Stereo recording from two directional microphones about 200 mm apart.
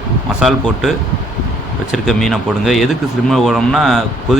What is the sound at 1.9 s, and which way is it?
Speech, centre (ahead or behind).